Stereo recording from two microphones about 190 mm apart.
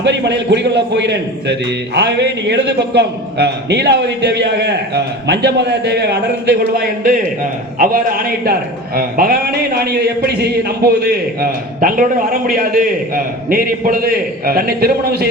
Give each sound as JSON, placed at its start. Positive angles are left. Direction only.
{"t": 0.0, "sound": "a man's voice", "side_deg": -65}